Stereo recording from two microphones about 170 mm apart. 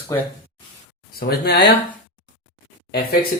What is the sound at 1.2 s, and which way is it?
Speech, 70° left (ahead or behind).